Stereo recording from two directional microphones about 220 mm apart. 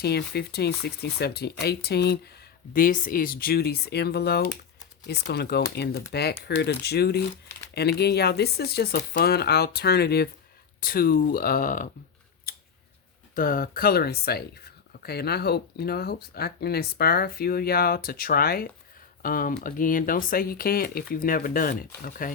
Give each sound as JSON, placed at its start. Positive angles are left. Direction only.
{"t": 0.0, "sound": "speech", "side_deg": 45}
{"t": 12.5, "sound": "a sound", "side_deg": 45}
{"t": 13.3, "sound": "speech", "side_deg": 40}